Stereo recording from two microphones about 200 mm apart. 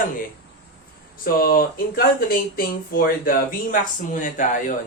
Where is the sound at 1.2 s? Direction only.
45° left (ahead or behind).